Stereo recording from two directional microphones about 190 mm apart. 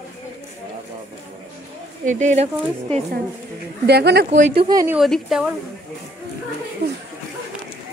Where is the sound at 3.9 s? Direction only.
60° right (ahead or behind).